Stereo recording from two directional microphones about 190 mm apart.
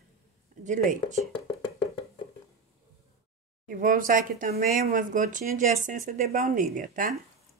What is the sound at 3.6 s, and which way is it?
Speech, 45° right (ahead or behind).